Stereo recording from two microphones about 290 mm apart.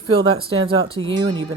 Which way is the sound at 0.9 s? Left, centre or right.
Right.